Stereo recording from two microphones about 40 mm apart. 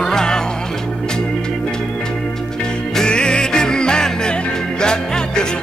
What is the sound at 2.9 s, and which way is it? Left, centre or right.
Music, left.